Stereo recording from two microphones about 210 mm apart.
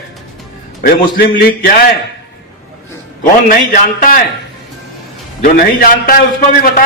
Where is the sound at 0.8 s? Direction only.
45° left (ahead or behind).